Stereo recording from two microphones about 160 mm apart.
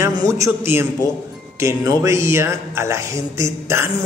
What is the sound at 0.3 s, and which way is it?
Speech, 15° right (ahead or behind).